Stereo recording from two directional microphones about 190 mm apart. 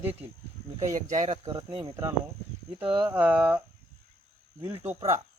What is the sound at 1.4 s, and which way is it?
Speech, 25° right (ahead or behind).